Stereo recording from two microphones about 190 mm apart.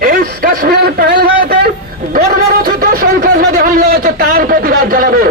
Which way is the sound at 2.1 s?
50° right (ahead or behind).